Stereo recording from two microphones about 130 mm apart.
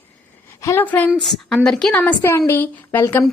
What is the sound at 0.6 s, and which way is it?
Speech, 25° left (ahead or behind).